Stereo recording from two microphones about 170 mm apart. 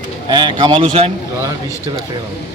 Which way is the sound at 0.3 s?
25° right (ahead or behind).